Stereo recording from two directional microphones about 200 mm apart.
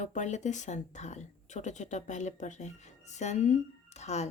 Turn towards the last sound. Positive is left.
turn(degrees=35)  # may be behind; listen again after turning